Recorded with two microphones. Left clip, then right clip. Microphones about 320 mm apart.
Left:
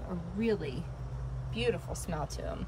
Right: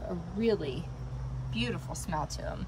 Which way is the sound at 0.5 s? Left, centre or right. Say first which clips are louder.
Right 3 dB; centre.